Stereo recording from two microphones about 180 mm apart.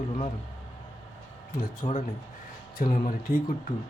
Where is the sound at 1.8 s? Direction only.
35° left (ahead or behind).